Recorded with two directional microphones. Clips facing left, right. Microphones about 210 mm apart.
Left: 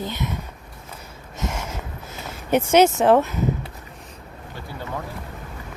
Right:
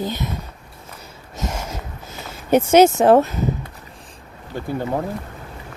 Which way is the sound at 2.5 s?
40° right (ahead or behind).